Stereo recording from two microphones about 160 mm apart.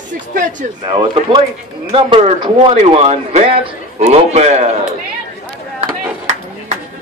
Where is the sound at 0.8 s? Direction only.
30° right (ahead or behind).